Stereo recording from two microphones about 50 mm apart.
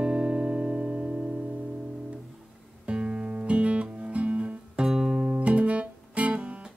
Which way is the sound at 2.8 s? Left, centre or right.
Right.